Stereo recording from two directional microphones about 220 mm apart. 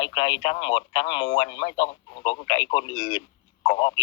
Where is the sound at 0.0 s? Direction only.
20° left (ahead or behind).